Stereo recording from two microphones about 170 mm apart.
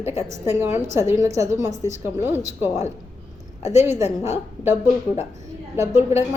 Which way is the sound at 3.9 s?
15° right (ahead or behind).